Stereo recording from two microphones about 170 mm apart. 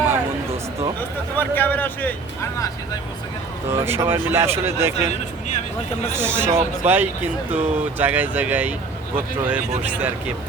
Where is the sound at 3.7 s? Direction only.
15° right (ahead or behind).